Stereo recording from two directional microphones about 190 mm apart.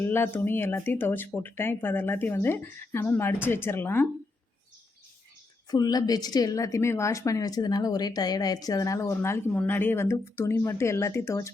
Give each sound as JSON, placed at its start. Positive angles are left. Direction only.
{"t": 0.0, "sound": "a woman's voice", "side_deg": 10}
{"t": 5.7, "sound": "a woman's voice", "side_deg": 20}